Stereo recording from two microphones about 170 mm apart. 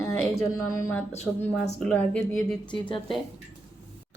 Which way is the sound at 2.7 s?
30° left (ahead or behind).